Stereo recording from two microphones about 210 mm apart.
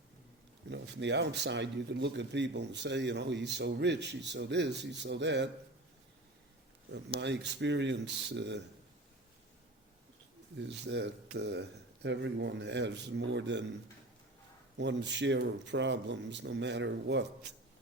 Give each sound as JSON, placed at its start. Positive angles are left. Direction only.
{"t": 0.7, "sound": "speech", "side_deg": -55}
{"t": 7.2, "sound": "speech", "side_deg": -55}
{"t": 10.6, "sound": "speech", "side_deg": -55}
{"t": 14.8, "sound": "speech", "side_deg": -55}